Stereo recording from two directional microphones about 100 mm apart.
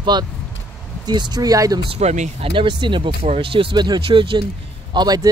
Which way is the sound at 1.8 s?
80° right.